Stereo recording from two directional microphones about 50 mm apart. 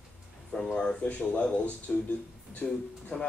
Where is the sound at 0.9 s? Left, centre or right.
Left.